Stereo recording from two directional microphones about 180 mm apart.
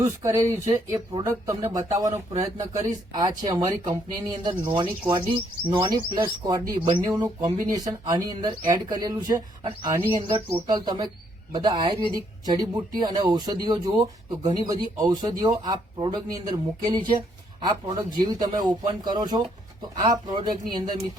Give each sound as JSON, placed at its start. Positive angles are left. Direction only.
{"t": 0.2, "sound": "speech", "side_deg": -15}